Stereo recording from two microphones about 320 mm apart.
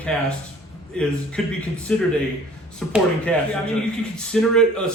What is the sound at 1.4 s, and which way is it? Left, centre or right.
Speech, centre.